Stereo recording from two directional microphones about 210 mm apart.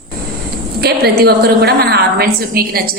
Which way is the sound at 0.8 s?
50° right (ahead or behind).